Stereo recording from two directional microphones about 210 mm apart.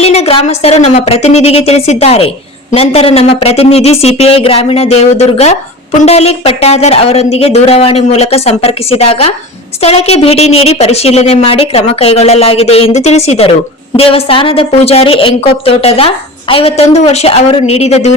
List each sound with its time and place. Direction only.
0.0 s a woman's voice: 30° left (ahead or behind)